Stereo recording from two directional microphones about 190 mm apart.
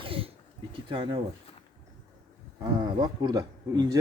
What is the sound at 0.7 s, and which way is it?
Bird, 30° right (ahead or behind).